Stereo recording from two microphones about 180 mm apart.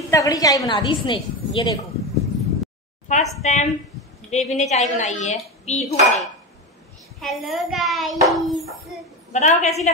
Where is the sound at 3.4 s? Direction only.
40° left (ahead or behind).